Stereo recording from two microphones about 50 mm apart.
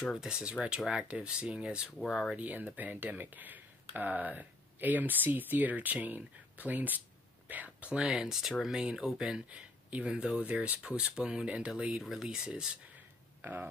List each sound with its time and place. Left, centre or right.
0.0 s speech: centre
0.3 s speech: centre
2.0 s speech: centre
2.3 s speech: right
8.2 s speech: centre
9.5 s a sound: right
10.0 s speech: centre
10.4 s speech: right
10.8 s speech: centre
12.0 s speech: centre
12.3 s speech: centre
13.4 s speech: right